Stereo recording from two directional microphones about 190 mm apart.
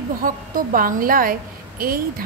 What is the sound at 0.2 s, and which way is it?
A woman's voice, 45° right (ahead or behind).